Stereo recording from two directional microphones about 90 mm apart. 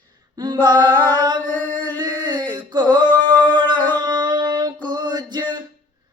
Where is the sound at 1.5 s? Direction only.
15° left (ahead or behind).